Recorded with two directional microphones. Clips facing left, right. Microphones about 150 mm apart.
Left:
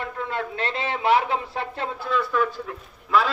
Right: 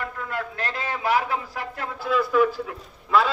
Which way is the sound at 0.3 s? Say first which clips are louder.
Left 2 dB; 25° left (ahead or behind).